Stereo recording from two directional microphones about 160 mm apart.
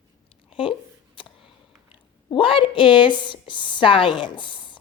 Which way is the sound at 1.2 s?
35° left (ahead or behind).